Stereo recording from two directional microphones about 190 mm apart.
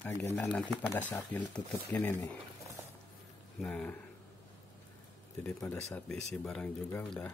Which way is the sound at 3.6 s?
5° left (ahead or behind).